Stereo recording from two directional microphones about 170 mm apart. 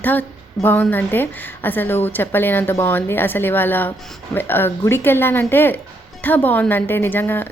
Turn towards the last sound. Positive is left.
turn(degrees=10)  # may be behind; listen again after turning